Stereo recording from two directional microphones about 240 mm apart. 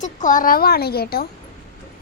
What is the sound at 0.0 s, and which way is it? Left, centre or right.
Speech, left.